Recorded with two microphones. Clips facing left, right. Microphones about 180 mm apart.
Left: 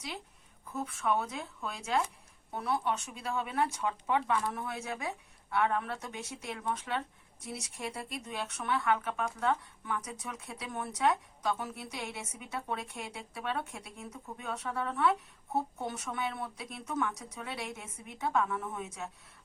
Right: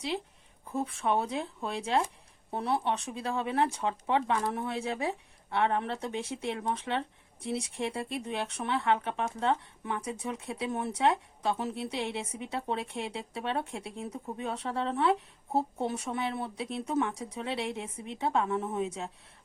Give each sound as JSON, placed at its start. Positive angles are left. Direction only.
{"t": 0.6, "sound": "speech", "side_deg": -30}